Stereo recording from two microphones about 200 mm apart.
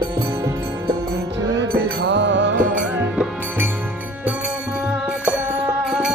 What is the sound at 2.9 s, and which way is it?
Music, 5° right (ahead or behind).